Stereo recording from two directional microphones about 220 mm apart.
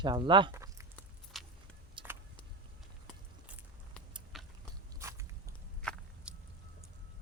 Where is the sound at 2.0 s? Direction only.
20° right (ahead or behind).